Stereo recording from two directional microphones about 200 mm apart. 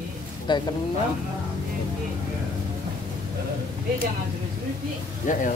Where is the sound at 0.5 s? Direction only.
25° left (ahead or behind).